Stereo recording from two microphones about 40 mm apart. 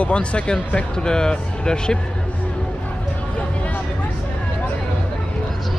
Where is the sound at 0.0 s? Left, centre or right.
Left.